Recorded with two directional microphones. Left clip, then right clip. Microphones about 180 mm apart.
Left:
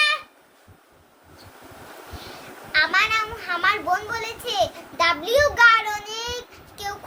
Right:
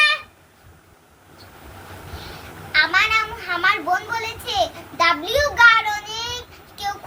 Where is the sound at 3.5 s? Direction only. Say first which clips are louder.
Right 2 dB; 50° left (ahead or behind).